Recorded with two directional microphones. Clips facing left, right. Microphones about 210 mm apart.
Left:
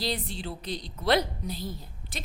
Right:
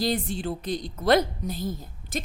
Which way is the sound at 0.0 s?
50° right (ahead or behind).